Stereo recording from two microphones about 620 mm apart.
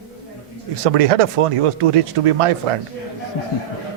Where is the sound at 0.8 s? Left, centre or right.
Right.